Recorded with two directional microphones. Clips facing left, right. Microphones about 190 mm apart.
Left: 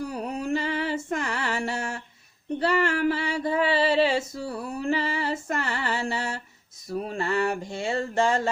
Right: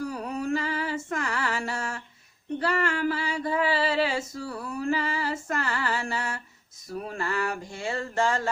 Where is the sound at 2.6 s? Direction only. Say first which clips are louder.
Left 3 dB; 25° left (ahead or behind).